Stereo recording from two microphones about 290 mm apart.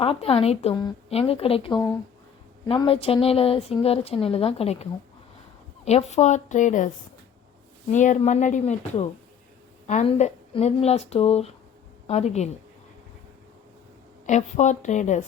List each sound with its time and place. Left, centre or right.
0.0 s a woman's voice: centre
14.3 s a woman's voice: left